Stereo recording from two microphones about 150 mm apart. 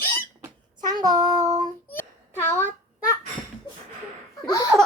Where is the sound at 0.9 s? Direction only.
25° right (ahead or behind).